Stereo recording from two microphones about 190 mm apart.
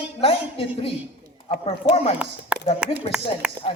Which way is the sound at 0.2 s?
30° left (ahead or behind).